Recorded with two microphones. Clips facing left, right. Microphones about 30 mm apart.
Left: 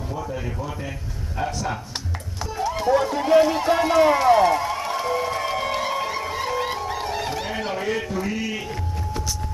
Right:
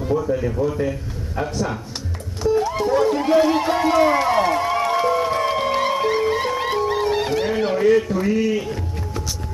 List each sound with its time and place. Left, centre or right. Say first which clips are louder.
0.2 s speech: right 8 dB; centre
2.4 s speech: right 5 dB; centre
3.7 s music: left 1 dB; centre; by 7.4 s right
7.4 s a sound: right 7 dB; centre
7.7 s speech: right 10 dB; centre
8.5 s music: right 7 dB; centre